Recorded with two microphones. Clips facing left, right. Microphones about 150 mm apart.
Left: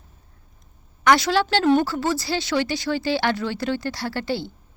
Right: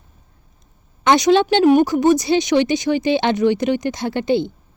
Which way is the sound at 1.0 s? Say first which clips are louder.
Right 5 dB; 20° right (ahead or behind).